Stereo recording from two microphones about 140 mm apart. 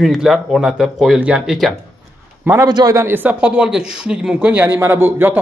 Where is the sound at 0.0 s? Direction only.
Centre (ahead or behind).